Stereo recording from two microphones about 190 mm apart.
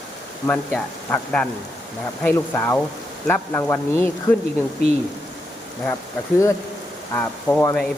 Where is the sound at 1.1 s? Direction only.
10° left (ahead or behind).